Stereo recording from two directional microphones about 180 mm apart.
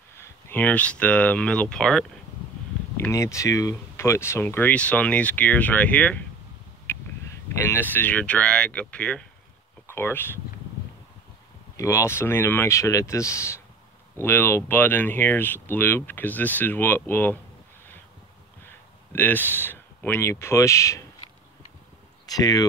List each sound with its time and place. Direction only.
0.2 s speech: 10° left (ahead or behind)
3.0 s speech: 15° left (ahead or behind)
11.7 s speech: 15° left (ahead or behind)
18.7 s speech: 10° left (ahead or behind)
22.2 s speech: 20° left (ahead or behind)